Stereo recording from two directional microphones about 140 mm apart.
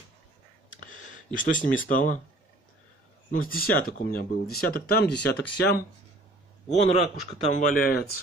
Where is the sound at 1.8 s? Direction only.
70° left (ahead or behind).